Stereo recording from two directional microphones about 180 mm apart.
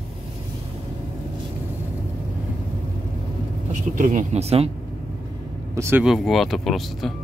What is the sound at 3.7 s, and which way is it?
Speech, 45° right (ahead or behind).